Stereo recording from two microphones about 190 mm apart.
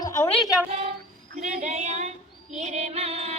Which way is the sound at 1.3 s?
35° right (ahead or behind).